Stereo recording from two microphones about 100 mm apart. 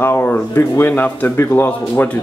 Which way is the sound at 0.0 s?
20° left (ahead or behind).